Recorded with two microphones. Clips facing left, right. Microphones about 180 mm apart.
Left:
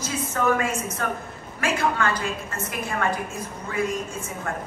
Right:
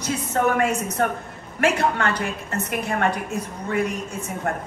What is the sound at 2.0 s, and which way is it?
A woman's voice, 60° right (ahead or behind).